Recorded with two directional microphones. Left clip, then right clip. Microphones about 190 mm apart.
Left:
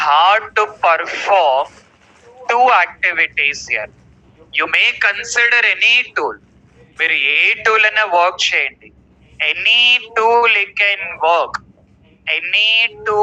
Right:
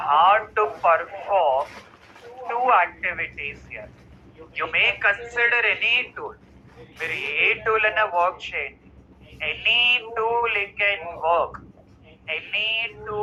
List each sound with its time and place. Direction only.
0.0 s radio: 50° left (ahead or behind)
2.5 s speech: 50° left (ahead or behind)